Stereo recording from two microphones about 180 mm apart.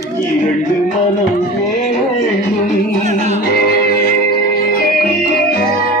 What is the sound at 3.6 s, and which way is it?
Music, 60° left (ahead or behind).